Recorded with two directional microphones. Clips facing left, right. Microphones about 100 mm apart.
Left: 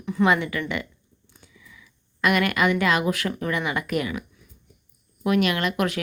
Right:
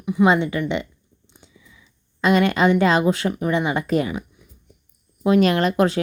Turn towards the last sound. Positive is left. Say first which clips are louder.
# right 6 dB
turn(degrees=-30)  # may be behind; listen again after turning